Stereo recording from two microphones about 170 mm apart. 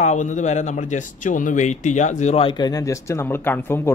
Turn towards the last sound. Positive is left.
turn(degrees=15)  # may be behind; listen again after turning